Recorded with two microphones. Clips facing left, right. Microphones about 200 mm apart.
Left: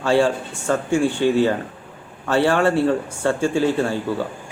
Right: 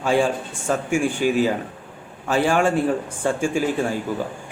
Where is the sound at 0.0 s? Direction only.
15° right (ahead or behind).